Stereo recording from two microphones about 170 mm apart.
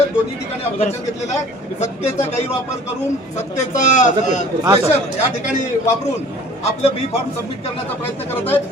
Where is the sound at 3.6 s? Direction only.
45° left (ahead or behind).